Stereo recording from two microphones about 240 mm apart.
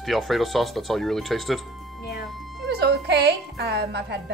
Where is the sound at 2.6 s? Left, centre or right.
Right.